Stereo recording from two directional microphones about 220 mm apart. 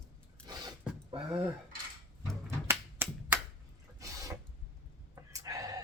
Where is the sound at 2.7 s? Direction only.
10° right (ahead or behind).